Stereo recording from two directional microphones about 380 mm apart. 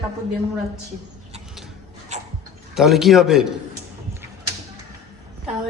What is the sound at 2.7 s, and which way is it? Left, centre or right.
Speech, centre.